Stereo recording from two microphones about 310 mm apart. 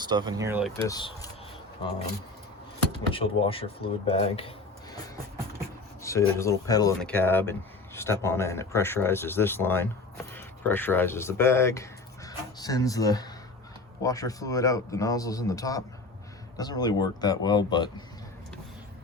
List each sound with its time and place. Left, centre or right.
0.0 s speech: centre
0.8 s speech: centre
3.1 s speech: centre
6.0 s speech: centre